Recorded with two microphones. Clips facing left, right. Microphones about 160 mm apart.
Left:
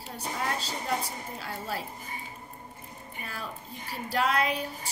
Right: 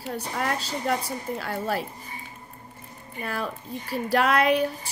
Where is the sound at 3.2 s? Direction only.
65° right (ahead or behind).